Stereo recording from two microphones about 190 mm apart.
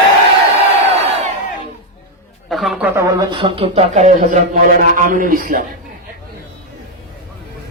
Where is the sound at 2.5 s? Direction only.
Centre (ahead or behind).